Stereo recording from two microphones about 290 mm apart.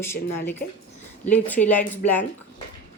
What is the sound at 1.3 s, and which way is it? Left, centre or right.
Speech, centre.